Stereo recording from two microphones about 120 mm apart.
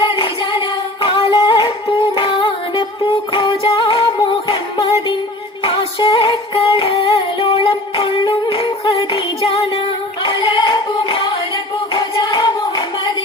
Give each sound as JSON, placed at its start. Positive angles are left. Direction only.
{"t": 0.0, "sound": "singing", "side_deg": 40}
{"t": 1.0, "sound": "music", "side_deg": 45}